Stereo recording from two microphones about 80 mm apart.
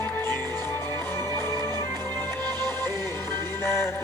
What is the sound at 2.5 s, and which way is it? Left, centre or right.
Music, right.